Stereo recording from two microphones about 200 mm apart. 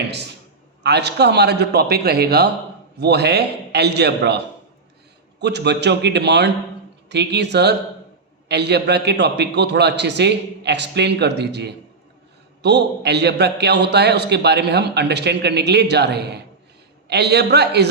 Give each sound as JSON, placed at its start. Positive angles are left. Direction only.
{"t": 0.8, "sound": "a man's voice", "side_deg": -55}
{"t": 5.4, "sound": "a man's voice", "side_deg": -60}